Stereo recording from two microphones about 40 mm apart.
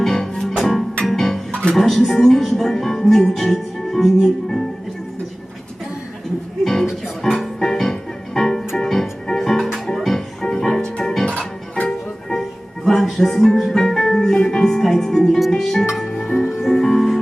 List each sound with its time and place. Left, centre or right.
0.0 s music: centre
1.7 s a woman's voice: centre
7.2 s music: centre
11.9 s music: centre